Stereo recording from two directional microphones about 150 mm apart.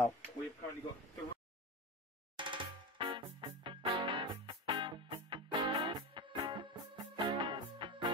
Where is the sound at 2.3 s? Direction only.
35° right (ahead or behind).